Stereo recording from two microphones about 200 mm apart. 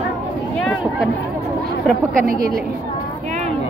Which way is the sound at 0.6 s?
Centre (ahead or behind).